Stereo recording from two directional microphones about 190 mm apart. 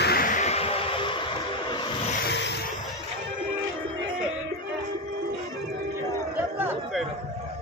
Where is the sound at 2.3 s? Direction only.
65° left (ahead or behind).